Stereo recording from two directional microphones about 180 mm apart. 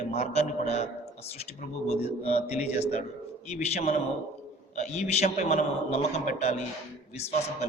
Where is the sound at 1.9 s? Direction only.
35° left (ahead or behind).